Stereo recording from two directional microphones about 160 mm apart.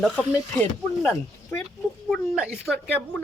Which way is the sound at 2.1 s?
5° right (ahead or behind).